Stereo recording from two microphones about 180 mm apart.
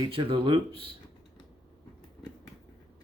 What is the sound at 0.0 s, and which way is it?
Speech, 30° right (ahead or behind).